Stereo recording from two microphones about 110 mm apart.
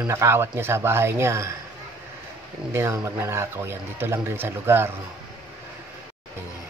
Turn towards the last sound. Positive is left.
turn(degrees=-20)  # may be behind; listen again after turning